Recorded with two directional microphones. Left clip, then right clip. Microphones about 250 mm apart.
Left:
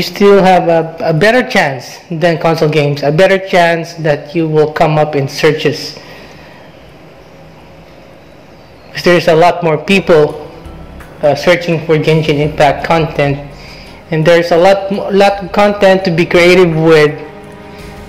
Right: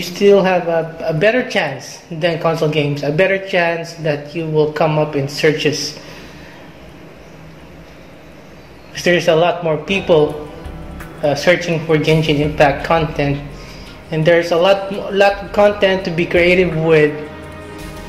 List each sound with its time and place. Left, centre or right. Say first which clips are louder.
0.0 s a man's voice: left 5 dB; left
8.9 s a man's voice: left 5 dB; left
11.3 s a man's voice: left 4 dB; left